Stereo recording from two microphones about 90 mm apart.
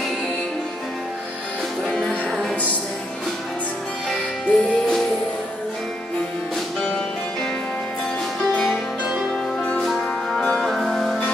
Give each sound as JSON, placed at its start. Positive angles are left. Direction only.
{"t": 1.9, "sound": "music", "side_deg": 5}
{"t": 4.1, "sound": "music", "side_deg": 10}
{"t": 9.3, "sound": "music", "side_deg": 10}